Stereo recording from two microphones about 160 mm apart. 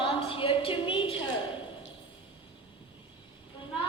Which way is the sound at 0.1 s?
35° left (ahead or behind).